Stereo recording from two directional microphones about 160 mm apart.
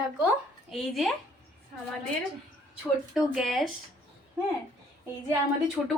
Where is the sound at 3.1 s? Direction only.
Centre (ahead or behind).